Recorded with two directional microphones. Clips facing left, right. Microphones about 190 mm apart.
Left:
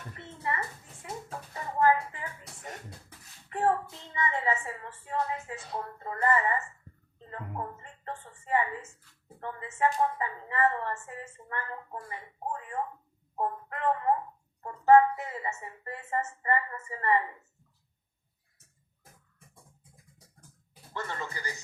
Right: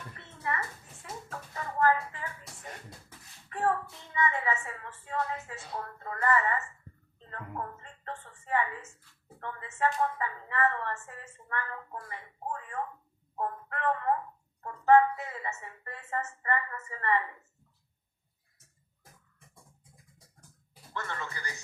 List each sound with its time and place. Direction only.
0.2 s a sound: 20° left (ahead or behind)
1.0 s music: 20° left (ahead or behind)
3.5 s a woman's voice: 20° left (ahead or behind)
7.2 s music: 15° left (ahead or behind)
9.4 s a woman's voice: 15° left (ahead or behind)
13.3 s a sound: 20° left (ahead or behind)
14.6 s a woman's voice: 20° left (ahead or behind)
20.9 s a woman's voice: 15° left (ahead or behind)